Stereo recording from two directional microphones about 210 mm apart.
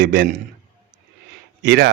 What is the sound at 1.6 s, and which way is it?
Speech, 55° right (ahead or behind).